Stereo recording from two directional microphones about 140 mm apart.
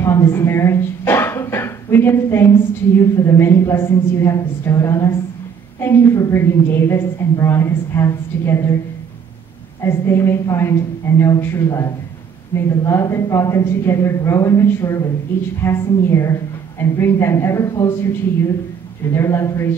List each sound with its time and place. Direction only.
0.0 s a sound: 20° left (ahead or behind)
3.2 s a woman's voice: 20° left (ahead or behind)
9.8 s a woman's voice: 20° left (ahead or behind)